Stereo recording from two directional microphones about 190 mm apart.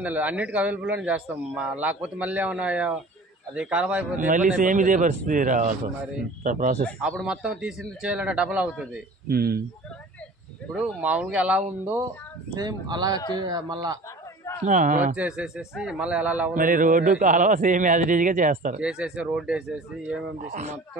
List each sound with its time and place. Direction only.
0.0 s a man's voice: 5° right (ahead or behind)
4.6 s a man's voice: 45° right (ahead or behind)
7.0 s a man's voice: 5° right (ahead or behind)
9.3 s a man's voice: 55° right (ahead or behind)
10.7 s a man's voice: 5° right (ahead or behind)
12.5 s speech: 20° right (ahead or behind)
14.6 s a man's voice: 40° right (ahead or behind)
15.1 s a man's voice: 5° right (ahead or behind)
16.5 s a man's voice: 45° right (ahead or behind)
18.8 s a man's voice: 5° right (ahead or behind)
20.4 s speech: 40° right (ahead or behind)